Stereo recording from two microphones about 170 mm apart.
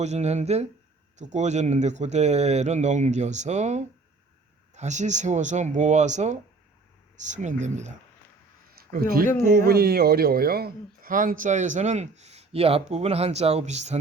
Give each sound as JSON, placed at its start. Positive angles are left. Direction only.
{"t": 0.0, "sound": "speech", "side_deg": -40}
{"t": 8.8, "sound": "speech", "side_deg": -60}